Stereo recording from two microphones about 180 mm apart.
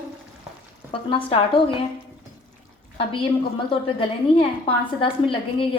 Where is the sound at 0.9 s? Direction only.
30° left (ahead or behind).